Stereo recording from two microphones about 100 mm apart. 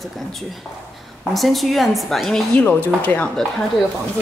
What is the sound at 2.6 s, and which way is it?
Speech, 15° left (ahead or behind).